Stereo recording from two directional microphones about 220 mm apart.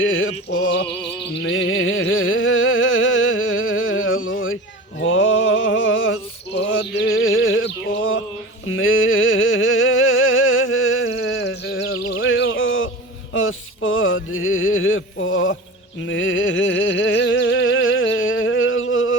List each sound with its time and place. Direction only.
0.0 s music: 65° left (ahead or behind)
6.6 s a sound: 55° left (ahead or behind)
13.3 s music: 65° left (ahead or behind)